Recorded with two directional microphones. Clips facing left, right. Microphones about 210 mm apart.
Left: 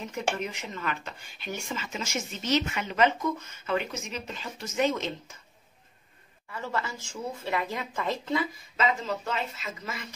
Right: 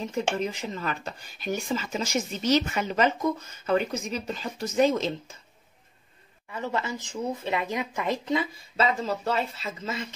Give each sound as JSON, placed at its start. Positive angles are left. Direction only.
{"t": 0.0, "sound": "speech", "side_deg": -30}
{"t": 6.5, "sound": "speech", "side_deg": -20}
{"t": 8.7, "sound": "speech", "side_deg": -35}